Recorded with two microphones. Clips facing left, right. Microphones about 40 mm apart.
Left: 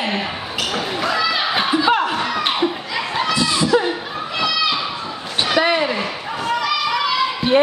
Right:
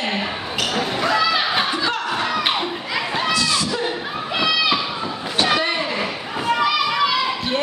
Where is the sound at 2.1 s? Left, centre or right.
Centre.